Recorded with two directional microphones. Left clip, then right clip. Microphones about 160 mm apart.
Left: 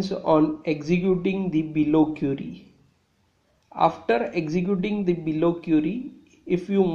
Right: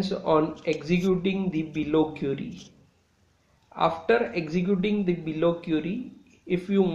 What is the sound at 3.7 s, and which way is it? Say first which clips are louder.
A man's voice: left 2 dB; 35° left (ahead or behind).